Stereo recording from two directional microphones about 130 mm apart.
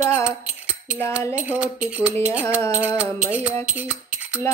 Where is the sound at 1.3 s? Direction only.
10° right (ahead or behind).